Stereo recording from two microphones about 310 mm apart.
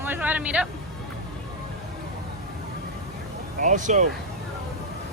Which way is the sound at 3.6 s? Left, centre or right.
Right.